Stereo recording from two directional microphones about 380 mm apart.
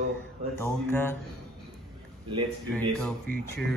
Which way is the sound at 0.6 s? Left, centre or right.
Centre.